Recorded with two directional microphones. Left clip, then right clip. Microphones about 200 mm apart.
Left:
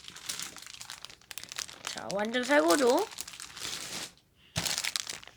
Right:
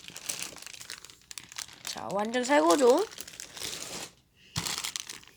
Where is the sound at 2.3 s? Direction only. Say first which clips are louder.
Right 1 dB; 10° right (ahead or behind).